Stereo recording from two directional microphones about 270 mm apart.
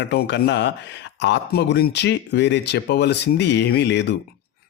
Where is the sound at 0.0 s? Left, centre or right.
Left.